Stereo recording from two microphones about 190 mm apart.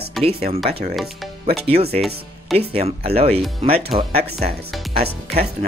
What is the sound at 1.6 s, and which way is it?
Speech, 30° right (ahead or behind).